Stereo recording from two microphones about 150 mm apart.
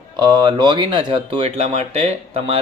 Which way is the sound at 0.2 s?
30° right (ahead or behind).